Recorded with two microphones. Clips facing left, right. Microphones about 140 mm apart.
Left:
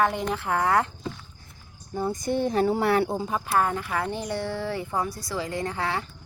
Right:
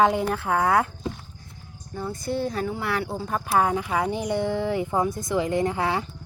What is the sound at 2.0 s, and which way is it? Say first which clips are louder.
Speech: left 2 dB; 20° left (ahead or behind).